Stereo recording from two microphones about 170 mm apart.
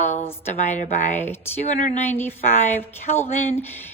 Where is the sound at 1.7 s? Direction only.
45° left (ahead or behind).